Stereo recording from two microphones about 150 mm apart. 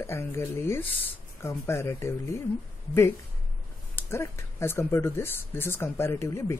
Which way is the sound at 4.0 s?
15° left (ahead or behind).